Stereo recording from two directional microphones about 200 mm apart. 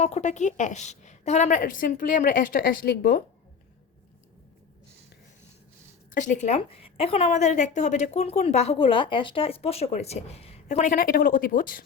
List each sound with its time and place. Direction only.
0.0 s a woman's voice: 35° left (ahead or behind)
6.1 s a woman's voice: 40° left (ahead or behind)